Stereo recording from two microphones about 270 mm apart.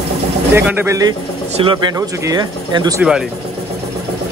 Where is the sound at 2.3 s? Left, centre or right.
Centre.